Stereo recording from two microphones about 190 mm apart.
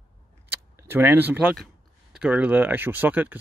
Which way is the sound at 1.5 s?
Centre (ahead or behind).